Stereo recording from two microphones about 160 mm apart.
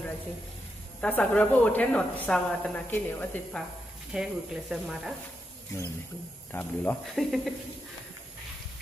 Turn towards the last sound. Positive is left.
turn(degrees=0)  # may be behind; listen again after turning